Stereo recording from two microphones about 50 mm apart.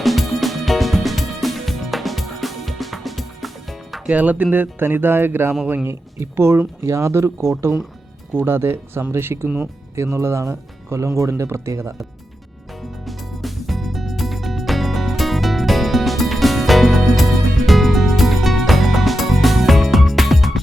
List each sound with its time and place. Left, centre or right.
0.0 s music: centre
4.1 s speech: right
4.5 s speech: right
5.9 s speech: right
6.8 s speech: right
8.4 s speech: right
13.1 s music: centre